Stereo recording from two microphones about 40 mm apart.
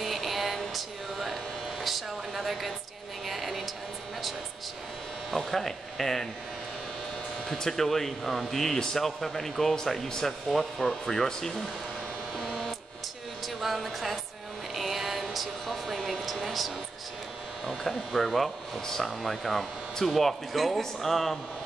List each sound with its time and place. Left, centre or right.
0.0 s a sound: centre
5.3 s speech: centre
7.4 s speech: centre
8.7 s speech: centre
12.4 s a sound: centre
17.6 s speech: centre